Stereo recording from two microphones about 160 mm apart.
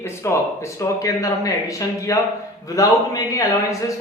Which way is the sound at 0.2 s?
15° left (ahead or behind).